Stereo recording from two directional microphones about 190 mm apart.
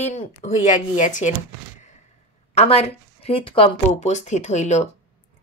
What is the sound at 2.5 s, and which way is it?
A woman's voice, 35° left (ahead or behind).